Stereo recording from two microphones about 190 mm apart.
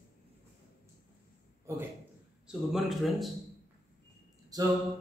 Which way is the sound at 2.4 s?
Centre (ahead or behind).